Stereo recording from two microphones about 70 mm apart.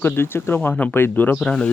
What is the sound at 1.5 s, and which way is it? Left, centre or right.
Speech, centre.